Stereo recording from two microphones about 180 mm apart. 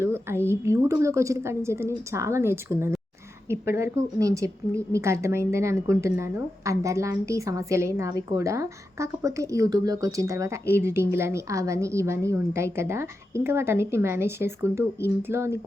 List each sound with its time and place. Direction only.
0.0 s a woman's voice: 15° right (ahead or behind)